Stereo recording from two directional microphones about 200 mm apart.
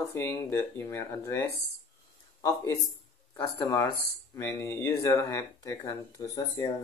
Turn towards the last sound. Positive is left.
turn(degrees=15)  # may be behind; listen again after turning